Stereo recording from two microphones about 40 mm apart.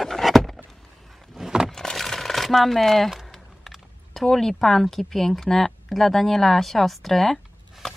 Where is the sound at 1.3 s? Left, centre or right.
Centre.